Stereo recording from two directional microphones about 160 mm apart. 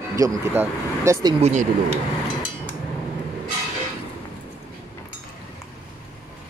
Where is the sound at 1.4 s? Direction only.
45° right (ahead or behind).